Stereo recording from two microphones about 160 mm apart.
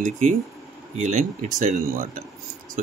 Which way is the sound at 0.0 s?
50° right (ahead or behind).